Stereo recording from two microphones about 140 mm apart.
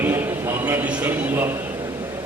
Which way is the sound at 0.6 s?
10° right (ahead or behind).